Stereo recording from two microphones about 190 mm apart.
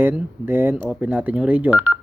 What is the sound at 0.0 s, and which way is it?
Speech, 10° right (ahead or behind).